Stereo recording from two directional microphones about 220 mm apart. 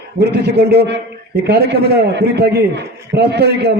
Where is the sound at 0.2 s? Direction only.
50° right (ahead or behind).